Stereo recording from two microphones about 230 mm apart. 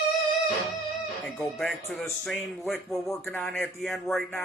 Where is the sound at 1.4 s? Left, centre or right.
Centre.